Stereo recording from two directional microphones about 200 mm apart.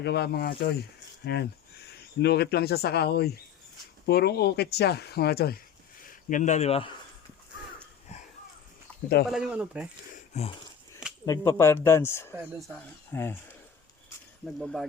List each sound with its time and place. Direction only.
0.0 s speech: 55° left (ahead or behind); by 6.9 s 30° left (ahead or behind)
8.9 s a sound: 5° left (ahead or behind)
9.3 s speech: 5° right (ahead or behind)
10.3 s a sound: 30° left (ahead or behind)
11.3 s speech: 15° left (ahead or behind)
14.4 s speech: centre (ahead or behind)